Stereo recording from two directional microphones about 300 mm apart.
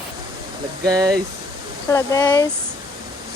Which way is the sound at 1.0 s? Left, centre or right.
Centre.